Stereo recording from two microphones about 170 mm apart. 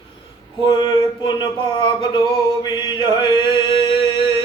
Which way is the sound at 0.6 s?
25° left (ahead or behind).